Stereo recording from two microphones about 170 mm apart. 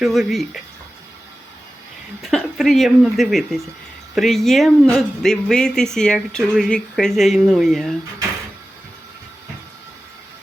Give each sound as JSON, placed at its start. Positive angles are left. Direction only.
{"t": 0.0, "sound": "speech", "side_deg": 0}
{"t": 2.2, "sound": "speech", "side_deg": 0}